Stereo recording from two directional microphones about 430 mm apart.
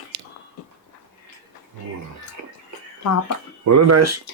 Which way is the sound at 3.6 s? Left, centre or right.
Right.